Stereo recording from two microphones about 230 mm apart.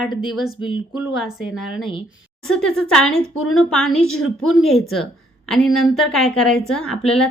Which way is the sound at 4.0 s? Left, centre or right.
Left.